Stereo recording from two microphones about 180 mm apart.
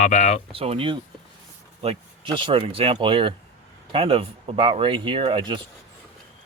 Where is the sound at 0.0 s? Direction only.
40° left (ahead or behind).